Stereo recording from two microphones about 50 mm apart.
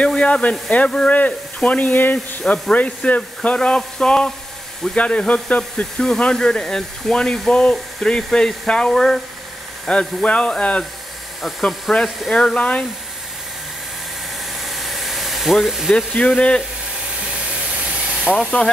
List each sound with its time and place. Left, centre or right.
0.0 s speech: left
8.9 s speech: centre
9.8 s speech: left
11.9 s speech: centre
12.5 s speech: left
14.6 s a sound: centre
16.3 s speech: left
17.2 s steam: right
18.6 s speech: left